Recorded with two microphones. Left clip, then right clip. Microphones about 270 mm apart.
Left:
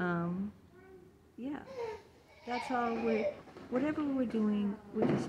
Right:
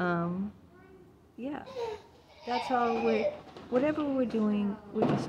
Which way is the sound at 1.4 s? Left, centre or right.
Right.